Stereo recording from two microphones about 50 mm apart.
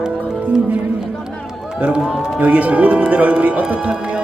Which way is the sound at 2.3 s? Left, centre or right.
Right.